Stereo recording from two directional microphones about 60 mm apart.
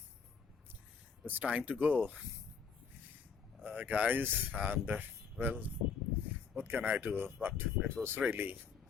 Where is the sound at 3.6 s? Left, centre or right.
Right.